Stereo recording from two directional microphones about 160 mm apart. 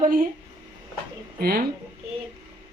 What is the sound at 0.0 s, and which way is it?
Speech, 60° right (ahead or behind).